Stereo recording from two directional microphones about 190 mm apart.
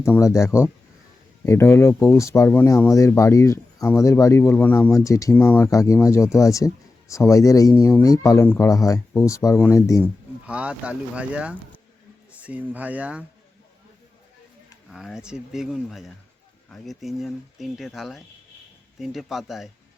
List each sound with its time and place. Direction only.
0.0 s speech: 15° left (ahead or behind)
10.0 s speech: 5° right (ahead or behind)
14.8 s speech: centre (ahead or behind)